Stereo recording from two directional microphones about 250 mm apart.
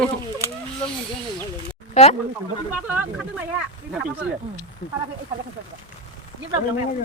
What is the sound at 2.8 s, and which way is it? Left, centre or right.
Speech, centre.